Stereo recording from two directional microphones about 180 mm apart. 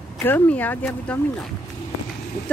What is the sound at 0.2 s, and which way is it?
Speech, 10° left (ahead or behind).